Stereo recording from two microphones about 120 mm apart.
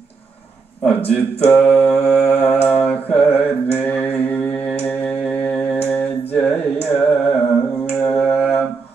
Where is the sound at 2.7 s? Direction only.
10° left (ahead or behind).